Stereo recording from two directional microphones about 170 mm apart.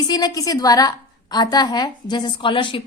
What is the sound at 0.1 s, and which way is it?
A woman's voice, 25° left (ahead or behind).